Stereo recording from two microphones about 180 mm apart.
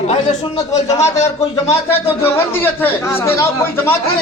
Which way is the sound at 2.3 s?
10° left (ahead or behind).